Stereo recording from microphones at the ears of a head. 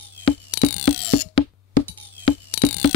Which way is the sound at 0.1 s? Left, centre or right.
Left.